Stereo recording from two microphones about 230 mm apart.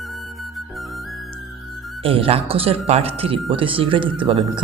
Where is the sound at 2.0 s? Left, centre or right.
Right.